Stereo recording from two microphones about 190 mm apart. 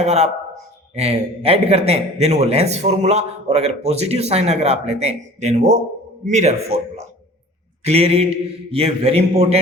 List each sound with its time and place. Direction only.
0.0 s a man's voice: 35° right (ahead or behind)